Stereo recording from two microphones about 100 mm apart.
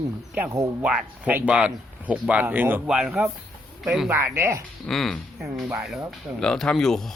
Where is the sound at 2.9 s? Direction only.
5° right (ahead or behind).